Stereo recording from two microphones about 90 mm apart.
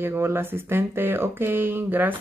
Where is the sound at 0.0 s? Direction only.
25° right (ahead or behind).